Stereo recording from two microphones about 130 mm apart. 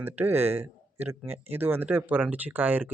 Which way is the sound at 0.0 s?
15° right (ahead or behind).